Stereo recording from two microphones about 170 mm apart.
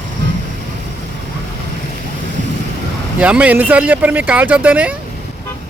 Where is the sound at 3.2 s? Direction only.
10° right (ahead or behind).